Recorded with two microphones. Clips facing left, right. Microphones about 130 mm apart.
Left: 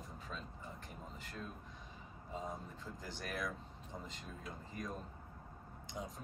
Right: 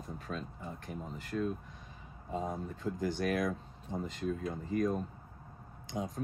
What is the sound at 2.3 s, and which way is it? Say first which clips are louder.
Speech: right 8 dB; 60° right (ahead or behind).